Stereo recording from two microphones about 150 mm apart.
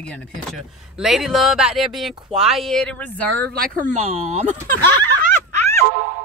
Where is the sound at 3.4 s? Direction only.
75° right (ahead or behind); by 4.6 s 50° right (ahead or behind).